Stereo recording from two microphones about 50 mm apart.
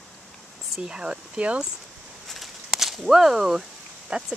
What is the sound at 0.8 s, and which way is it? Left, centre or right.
Speech, centre.